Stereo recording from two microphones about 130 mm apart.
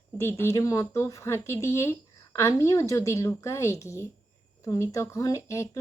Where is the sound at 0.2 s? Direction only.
20° left (ahead or behind).